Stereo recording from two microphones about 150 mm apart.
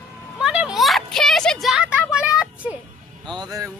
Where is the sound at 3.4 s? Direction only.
25° right (ahead or behind).